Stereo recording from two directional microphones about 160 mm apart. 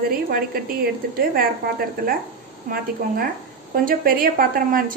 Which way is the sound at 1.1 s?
65° right (ahead or behind).